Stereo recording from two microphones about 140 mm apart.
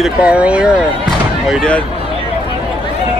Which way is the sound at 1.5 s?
5° left (ahead or behind).